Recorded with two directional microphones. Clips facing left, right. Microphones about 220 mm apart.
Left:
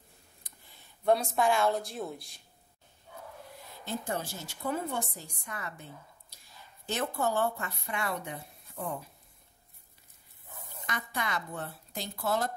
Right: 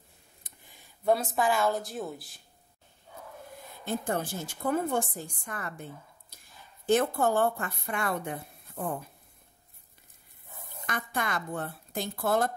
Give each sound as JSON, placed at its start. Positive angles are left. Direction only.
{"t": 1.0, "sound": "a woman's voice", "side_deg": 0}
{"t": 3.8, "sound": "a woman's voice", "side_deg": -55}
{"t": 6.9, "sound": "a woman's voice", "side_deg": -50}
{"t": 10.9, "sound": "a woman's voice", "side_deg": -50}